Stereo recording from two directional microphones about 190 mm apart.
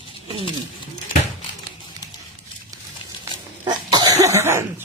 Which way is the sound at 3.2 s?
20° right (ahead or behind).